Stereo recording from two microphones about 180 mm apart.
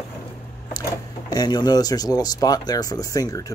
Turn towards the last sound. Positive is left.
turn(degrees=20)  # may be behind; listen again after turning